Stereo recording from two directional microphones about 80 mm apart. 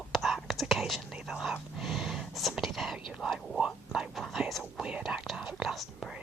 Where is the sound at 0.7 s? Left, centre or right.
Centre.